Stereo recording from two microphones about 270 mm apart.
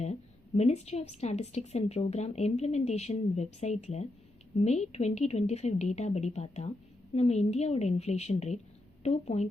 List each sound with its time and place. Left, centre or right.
0.0 s a woman's voice: left